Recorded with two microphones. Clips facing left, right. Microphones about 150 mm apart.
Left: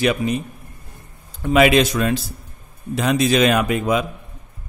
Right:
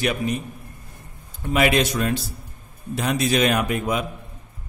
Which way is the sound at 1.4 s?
90° left.